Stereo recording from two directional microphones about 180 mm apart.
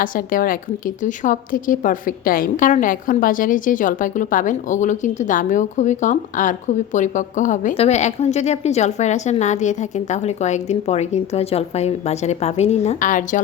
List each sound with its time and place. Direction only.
0.0 s a woman's voice: 50° left (ahead or behind)